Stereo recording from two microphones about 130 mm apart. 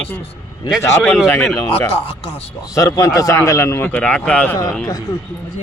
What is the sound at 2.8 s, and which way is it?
Speech, 25° left (ahead or behind).